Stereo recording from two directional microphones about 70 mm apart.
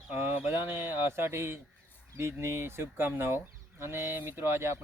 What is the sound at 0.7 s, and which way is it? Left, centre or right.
Speech, right.